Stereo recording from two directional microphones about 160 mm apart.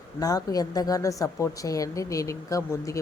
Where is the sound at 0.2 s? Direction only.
25° left (ahead or behind).